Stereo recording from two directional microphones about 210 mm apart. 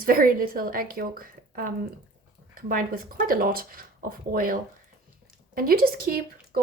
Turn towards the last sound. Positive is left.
turn(degrees=-45)  # may be behind; listen again after turning